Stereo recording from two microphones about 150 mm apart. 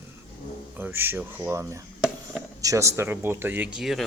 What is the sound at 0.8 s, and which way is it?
Speech, 15° right (ahead or behind).